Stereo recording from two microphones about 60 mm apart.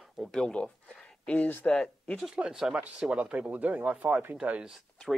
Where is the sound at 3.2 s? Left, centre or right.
Right.